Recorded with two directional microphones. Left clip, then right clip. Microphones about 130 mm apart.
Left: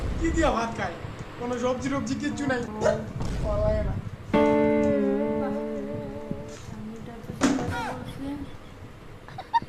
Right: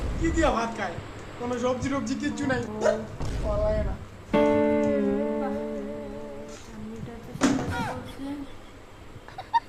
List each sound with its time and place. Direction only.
0.0 s speech: centre (ahead or behind)
1.4 s dog: centre (ahead or behind)
6.4 s music: centre (ahead or behind)
9.4 s a sound: centre (ahead or behind)